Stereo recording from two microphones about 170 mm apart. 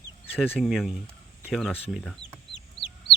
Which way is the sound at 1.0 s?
5° right (ahead or behind).